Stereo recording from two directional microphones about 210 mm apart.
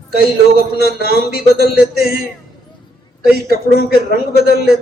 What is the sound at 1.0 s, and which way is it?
Speech, 45° left (ahead or behind).